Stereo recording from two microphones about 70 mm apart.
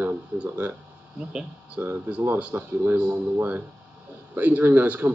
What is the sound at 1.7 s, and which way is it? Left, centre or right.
Speech, right.